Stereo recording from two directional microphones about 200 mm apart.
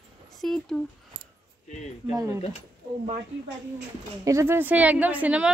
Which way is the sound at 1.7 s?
35° left (ahead or behind).